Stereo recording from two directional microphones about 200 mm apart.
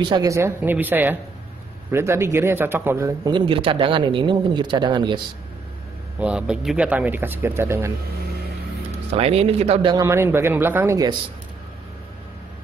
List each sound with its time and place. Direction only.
0.0 s a man's voice: 20° right (ahead or behind)
6.1 s speech: 5° right (ahead or behind)
9.1 s a man's voice: 30° right (ahead or behind)
10.0 s speech: 10° right (ahead or behind)